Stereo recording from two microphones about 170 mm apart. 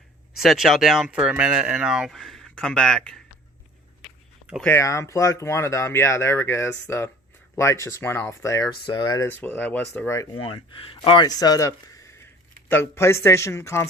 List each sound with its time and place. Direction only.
0.4 s speech: centre (ahead or behind)
4.0 s a sound: centre (ahead or behind)
4.7 s speech: 15° left (ahead or behind)
9.2 s speech: 10° left (ahead or behind)
10.3 s speech: 30° left (ahead or behind); by 13.8 s 15° left (ahead or behind)